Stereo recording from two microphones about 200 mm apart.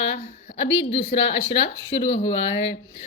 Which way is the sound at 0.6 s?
65° left (ahead or behind).